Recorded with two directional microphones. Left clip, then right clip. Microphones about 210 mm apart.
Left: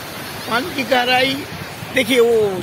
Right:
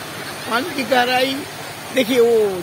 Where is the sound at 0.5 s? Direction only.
Centre (ahead or behind).